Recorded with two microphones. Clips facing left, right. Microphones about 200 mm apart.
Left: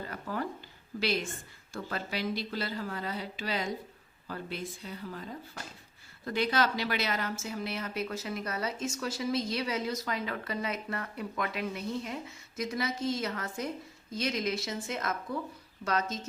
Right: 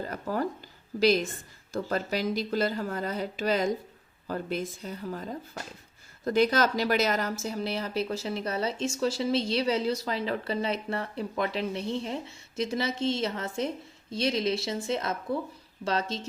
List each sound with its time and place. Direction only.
0.0 s a sound: 40° right (ahead or behind)
0.9 s a woman's voice: 40° right (ahead or behind)
6.2 s speech: 45° right (ahead or behind)